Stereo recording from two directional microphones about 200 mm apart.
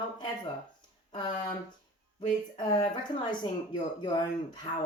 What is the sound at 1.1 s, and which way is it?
Speech, 20° left (ahead or behind).